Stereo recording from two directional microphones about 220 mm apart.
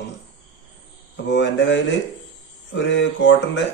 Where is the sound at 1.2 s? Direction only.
55° left (ahead or behind).